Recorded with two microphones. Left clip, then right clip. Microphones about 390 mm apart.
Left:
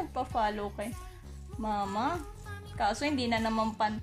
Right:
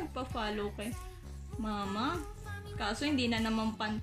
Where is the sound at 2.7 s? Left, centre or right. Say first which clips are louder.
Left 4 dB; centre.